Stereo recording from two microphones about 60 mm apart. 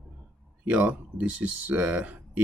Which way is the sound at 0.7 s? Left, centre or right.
Right.